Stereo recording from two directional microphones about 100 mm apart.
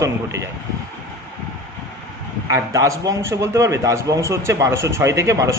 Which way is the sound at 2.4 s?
35° right (ahead or behind).